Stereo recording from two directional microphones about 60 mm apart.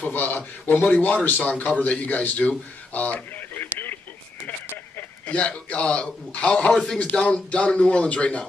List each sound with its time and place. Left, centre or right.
0.0 s speech: left
2.9 s radio: left
5.3 s speech: left